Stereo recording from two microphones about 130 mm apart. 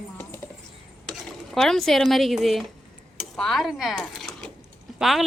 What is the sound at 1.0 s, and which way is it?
Speech, centre (ahead or behind).